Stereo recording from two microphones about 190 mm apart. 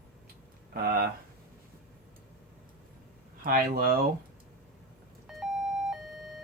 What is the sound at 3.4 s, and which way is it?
Speech, 50° right (ahead or behind).